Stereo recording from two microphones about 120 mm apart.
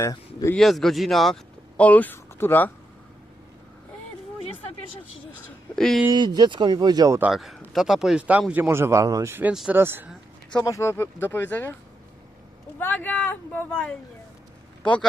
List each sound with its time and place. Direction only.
0.0 s speech: 30° left (ahead or behind)
0.5 s speech: 5° left (ahead or behind)
1.7 s speech: 10° left (ahead or behind)
5.3 s speech: 5° left (ahead or behind)
6.1 s speech: 35° right (ahead or behind)
7.3 s speech: centre (ahead or behind)
8.6 s a man's voice: 20° right (ahead or behind)
9.5 s speech: 10° right (ahead or behind)
9.7 s speech: 20° right (ahead or behind)
10.5 s speech: 30° left (ahead or behind); by 11.8 s 15° left (ahead or behind)
12.8 s speech: 15° left (ahead or behind)